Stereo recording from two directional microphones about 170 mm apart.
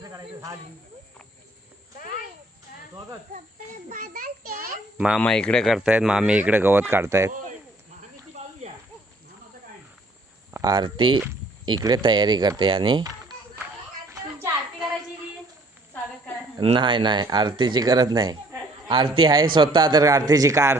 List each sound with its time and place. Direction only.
0.0 s speech: 20° right (ahead or behind)
3.8 s a child's voice: 50° right (ahead or behind)
4.9 s speech: 5° right (ahead or behind)
5.2 s speech: 5° left (ahead or behind); by 7.3 s 15° right (ahead or behind)
8.4 s snake: 45° right (ahead or behind)
10.5 s speech: 25° right (ahead or behind)
14.1 s a sound: 15° right (ahead or behind)
16.6 s speech: 30° right (ahead or behind)